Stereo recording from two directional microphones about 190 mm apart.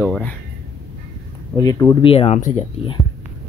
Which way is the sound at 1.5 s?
20° left (ahead or behind).